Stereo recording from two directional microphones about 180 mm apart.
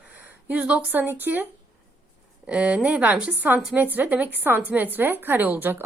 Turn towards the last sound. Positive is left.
turn(degrees=-10)  # may be behind; listen again after turning